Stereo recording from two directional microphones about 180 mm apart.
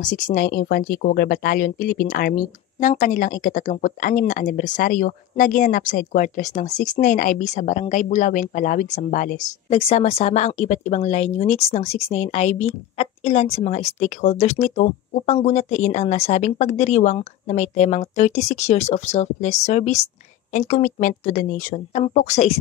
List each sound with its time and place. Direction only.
0.0 s speech: 45° left (ahead or behind)
9.8 s speech: 30° left (ahead or behind)